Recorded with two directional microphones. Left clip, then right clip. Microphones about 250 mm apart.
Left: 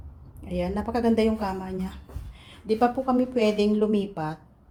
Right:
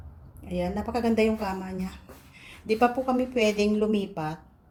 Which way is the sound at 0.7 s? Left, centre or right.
Centre.